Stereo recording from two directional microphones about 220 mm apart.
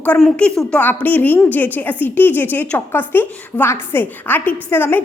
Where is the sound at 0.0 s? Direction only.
5° left (ahead or behind).